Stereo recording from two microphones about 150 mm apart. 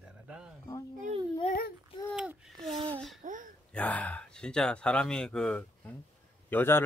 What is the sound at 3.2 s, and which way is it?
Speech, 60° right (ahead or behind).